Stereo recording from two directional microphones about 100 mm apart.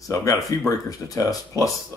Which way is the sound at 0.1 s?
30° left (ahead or behind).